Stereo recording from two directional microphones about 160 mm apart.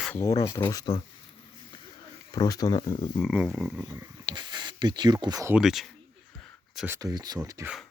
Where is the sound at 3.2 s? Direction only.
5° right (ahead or behind); by 5.5 s 20° right (ahead or behind).